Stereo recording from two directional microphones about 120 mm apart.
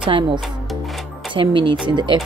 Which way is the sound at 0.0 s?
45° right (ahead or behind).